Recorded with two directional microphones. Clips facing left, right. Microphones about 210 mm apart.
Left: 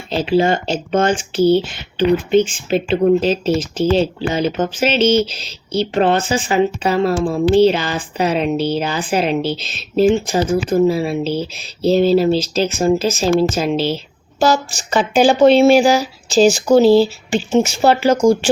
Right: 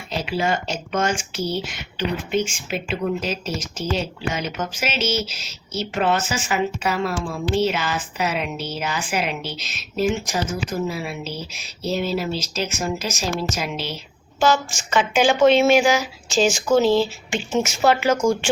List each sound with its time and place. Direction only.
0.1 s speech: 30° left (ahead or behind)